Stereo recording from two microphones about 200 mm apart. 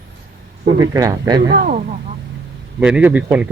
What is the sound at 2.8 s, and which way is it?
Speech, 5° right (ahead or behind).